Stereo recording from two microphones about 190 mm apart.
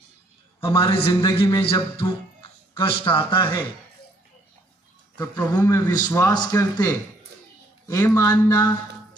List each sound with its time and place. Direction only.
0.6 s a man's voice: 30° left (ahead or behind)
5.1 s speech: 25° left (ahead or behind)
5.5 s a man's voice: 10° left (ahead or behind)